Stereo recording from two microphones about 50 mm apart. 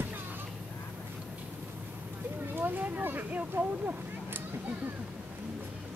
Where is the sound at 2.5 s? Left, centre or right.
Right.